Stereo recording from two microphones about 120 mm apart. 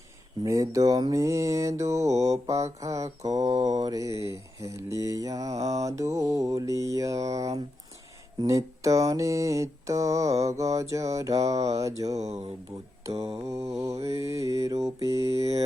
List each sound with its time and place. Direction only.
0.4 s mantra: 25° right (ahead or behind)
12.1 s mantra: 65° right (ahead or behind)
13.5 s mantra: 25° right (ahead or behind)